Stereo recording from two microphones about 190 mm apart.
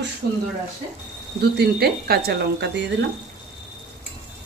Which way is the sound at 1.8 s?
55° right (ahead or behind).